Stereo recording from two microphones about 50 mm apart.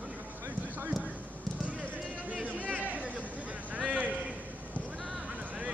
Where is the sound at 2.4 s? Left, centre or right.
Right.